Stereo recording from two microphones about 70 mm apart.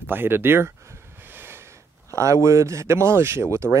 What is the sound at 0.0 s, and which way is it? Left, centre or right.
Speech, right.